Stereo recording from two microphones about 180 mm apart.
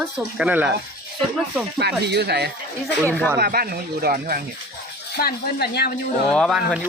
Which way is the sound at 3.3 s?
55° right (ahead or behind).